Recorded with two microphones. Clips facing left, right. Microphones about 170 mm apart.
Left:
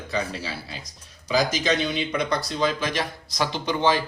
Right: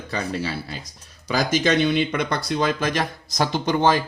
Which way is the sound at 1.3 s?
55° right (ahead or behind).